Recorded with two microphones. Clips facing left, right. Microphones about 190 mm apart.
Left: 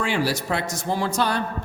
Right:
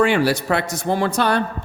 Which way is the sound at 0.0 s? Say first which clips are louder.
Right 7 dB; 60° right (ahead or behind).